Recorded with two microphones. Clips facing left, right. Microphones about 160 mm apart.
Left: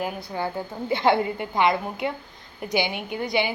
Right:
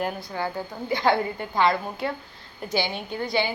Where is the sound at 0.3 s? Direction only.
20° left (ahead or behind).